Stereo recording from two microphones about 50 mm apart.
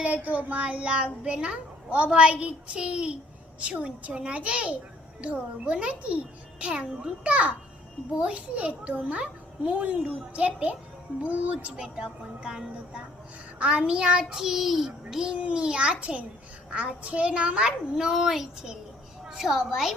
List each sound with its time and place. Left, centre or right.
0.0 s a child's voice: right
11.8 s child singing: centre
15.3 s a child's voice: right
17.9 s a woman's voice: centre